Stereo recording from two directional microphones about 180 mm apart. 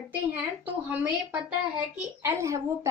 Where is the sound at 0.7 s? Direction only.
10° right (ahead or behind).